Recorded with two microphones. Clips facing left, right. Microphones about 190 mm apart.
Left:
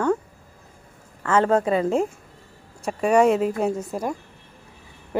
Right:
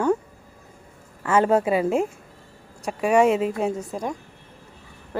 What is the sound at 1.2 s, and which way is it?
A woman's voice, 15° right (ahead or behind).